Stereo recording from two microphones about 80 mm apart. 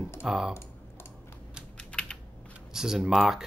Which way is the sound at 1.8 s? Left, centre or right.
Centre.